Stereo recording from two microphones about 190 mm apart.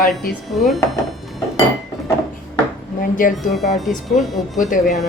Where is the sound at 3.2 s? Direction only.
50° left (ahead or behind).